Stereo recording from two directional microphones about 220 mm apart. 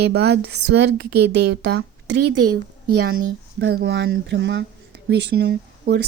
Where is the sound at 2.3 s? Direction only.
90° right.